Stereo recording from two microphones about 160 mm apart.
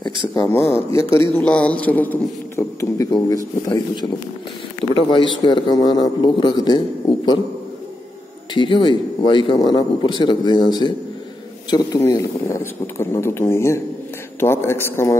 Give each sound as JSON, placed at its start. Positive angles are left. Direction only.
{"t": 0.3, "sound": "a man's voice", "side_deg": 20}
{"t": 5.1, "sound": "a man's voice", "side_deg": 30}
{"t": 8.5, "sound": "a man's voice", "side_deg": 30}